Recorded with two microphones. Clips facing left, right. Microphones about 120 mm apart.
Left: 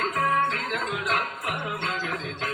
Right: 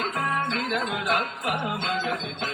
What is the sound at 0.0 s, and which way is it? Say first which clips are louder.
Music: left 3 dB; 20° right (ahead or behind).